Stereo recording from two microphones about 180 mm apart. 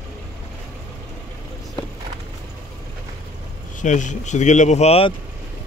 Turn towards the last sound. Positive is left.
turn(degrees=35)  # may be behind; listen again after turning